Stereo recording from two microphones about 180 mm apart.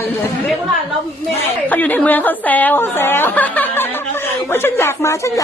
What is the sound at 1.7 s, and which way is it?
Speech, 10° left (ahead or behind).